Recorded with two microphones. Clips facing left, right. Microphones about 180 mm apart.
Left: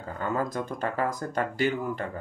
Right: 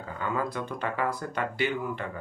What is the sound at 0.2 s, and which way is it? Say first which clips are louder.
Speech: left 2 dB; 45° left (ahead or behind).